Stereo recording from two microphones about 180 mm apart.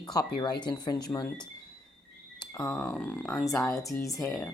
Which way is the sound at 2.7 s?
5° left (ahead or behind).